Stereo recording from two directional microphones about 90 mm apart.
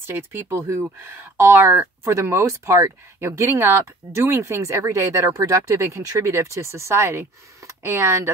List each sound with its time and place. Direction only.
0.0 s speech: 25° right (ahead or behind)